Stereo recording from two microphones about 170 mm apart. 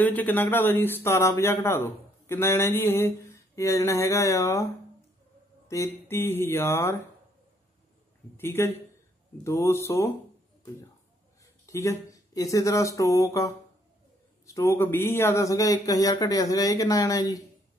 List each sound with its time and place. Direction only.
0.0 s speech: 10° left (ahead or behind)
5.7 s speech: 15° left (ahead or behind)
8.4 s speech: 15° left (ahead or behind)
11.6 s a man's voice: 20° left (ahead or behind)